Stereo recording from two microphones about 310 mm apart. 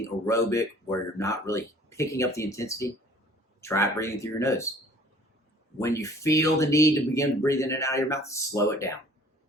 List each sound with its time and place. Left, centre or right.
0.3 s speech: centre
5.8 s speech: centre